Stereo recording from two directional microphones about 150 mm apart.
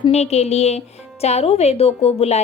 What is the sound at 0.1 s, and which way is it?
Speech, 45° left (ahead or behind).